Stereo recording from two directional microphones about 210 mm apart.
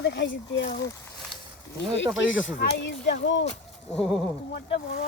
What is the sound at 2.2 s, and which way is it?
Speech, 60° left (ahead or behind).